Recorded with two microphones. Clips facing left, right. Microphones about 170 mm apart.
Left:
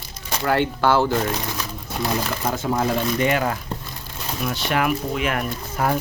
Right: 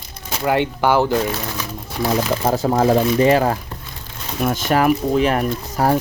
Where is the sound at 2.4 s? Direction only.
35° right (ahead or behind).